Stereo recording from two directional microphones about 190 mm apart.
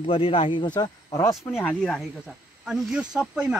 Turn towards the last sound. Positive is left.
turn(degrees=-5)  # may be behind; listen again after turning